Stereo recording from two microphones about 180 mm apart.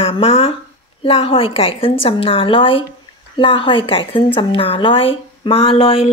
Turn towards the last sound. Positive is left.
turn(degrees=30)  # may be behind; listen again after turning